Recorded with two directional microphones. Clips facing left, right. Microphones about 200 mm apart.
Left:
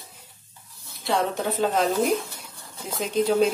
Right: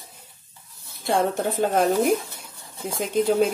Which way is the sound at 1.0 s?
50° right (ahead or behind).